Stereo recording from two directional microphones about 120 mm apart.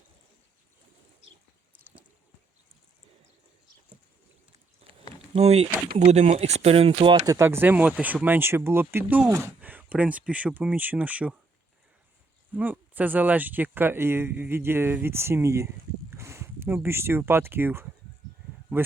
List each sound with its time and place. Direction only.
4.8 s a sound: 65° right (ahead or behind)
5.3 s speech: 60° right (ahead or behind)
7.3 s speech: 25° right (ahead or behind)
9.6 s speech: 15° right (ahead or behind)
12.5 s speech: 15° right (ahead or behind)